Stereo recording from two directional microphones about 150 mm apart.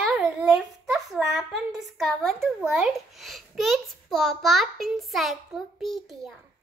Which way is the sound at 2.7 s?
Centre (ahead or behind).